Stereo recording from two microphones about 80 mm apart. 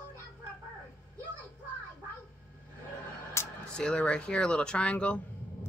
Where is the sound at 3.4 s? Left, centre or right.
Left.